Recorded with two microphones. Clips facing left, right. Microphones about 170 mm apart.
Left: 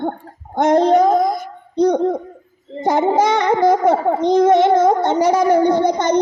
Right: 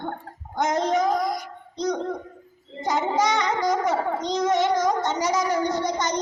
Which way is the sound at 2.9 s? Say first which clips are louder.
Left 9 dB; 55° left (ahead or behind).